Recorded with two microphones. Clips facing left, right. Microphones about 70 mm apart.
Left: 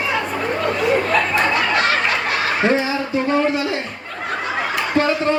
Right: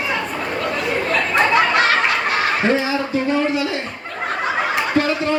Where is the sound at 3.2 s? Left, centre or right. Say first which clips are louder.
Left 3 dB; left.